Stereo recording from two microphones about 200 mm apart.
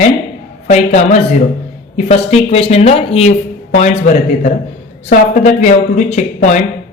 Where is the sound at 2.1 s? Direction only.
30° left (ahead or behind).